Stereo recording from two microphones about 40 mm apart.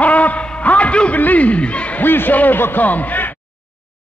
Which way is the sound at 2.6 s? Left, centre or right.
Left.